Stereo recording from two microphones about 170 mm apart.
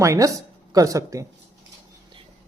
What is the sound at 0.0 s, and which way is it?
A woman's voice, 20° right (ahead or behind).